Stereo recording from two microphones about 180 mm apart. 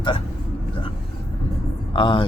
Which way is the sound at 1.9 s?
30° left (ahead or behind).